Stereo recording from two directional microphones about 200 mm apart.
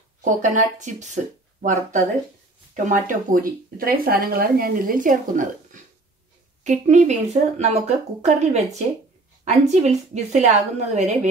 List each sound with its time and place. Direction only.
0.2 s speech: 35° right (ahead or behind)